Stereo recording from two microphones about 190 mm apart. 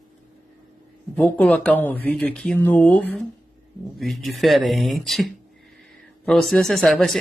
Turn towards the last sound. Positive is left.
turn(degrees=0)  # may be behind; listen again after turning